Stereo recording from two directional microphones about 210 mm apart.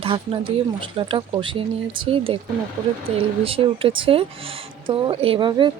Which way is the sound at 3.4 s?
25° right (ahead or behind).